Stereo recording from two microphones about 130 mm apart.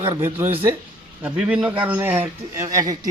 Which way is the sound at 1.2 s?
10° right (ahead or behind).